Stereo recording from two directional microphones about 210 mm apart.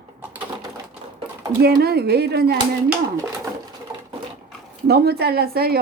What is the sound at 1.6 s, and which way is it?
Speech, 50° right (ahead or behind).